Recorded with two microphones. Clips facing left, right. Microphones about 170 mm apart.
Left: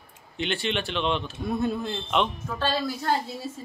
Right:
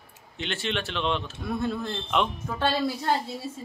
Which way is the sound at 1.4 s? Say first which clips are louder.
Left 3 dB; 20° left (ahead or behind).